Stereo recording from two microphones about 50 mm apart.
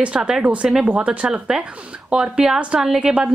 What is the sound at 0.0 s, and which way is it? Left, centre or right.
A woman's voice, centre.